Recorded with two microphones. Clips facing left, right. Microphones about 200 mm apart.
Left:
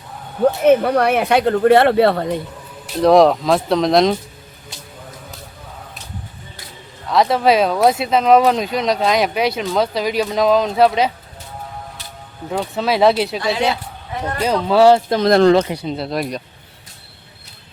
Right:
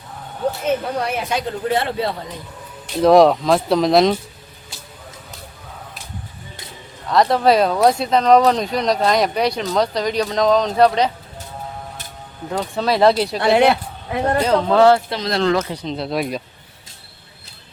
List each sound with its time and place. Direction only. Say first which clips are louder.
0.6 s speech: left 10 dB; 65° left (ahead or behind)
2.9 s speech: even; centre (ahead or behind)
7.1 s speech: even; centre (ahead or behind)
12.5 s speech: left 1 dB; 5° left (ahead or behind)
13.4 s speech: right 5 dB; 60° right (ahead or behind)
14.4 s speech: left 2 dB; 10° left (ahead or behind)
15.1 s speech: left 7 dB; 50° left (ahead or behind)
15.7 s speech: left 1 dB; 10° left (ahead or behind)